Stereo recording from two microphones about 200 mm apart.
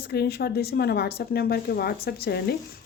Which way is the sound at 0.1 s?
55° left (ahead or behind).